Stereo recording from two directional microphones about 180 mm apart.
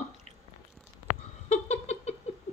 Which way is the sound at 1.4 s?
40° left (ahead or behind).